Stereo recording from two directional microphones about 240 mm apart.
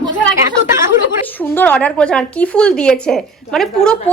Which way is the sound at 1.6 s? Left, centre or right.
Centre.